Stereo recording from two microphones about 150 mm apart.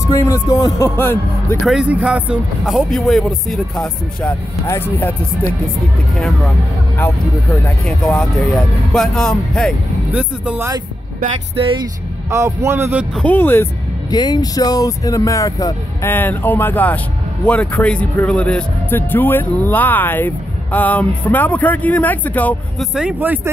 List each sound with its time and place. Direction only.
0.1 s speech: 20° left (ahead or behind)
1.6 s speech: 5° right (ahead or behind); by 5.1 s 15° left (ahead or behind)
7.8 s speech: 5° left (ahead or behind)
10.1 s a man's voice: 10° right (ahead or behind)
11.5 s speech: 35° right (ahead or behind)
12.3 s a man's voice: 20° right (ahead or behind)
13.1 s speech: 10° left (ahead or behind)
14.1 s speech: 30° left (ahead or behind); by 22.8 s 10° left (ahead or behind)
22.9 s a man's voice: 10° right (ahead or behind)